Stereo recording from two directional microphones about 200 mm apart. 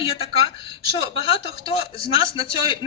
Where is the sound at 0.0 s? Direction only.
25° left (ahead or behind).